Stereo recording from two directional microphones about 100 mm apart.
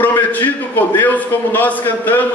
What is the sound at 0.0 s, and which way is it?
A man's voice, 20° left (ahead or behind).